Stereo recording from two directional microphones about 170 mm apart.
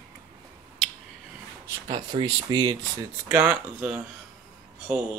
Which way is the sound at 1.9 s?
25° right (ahead or behind).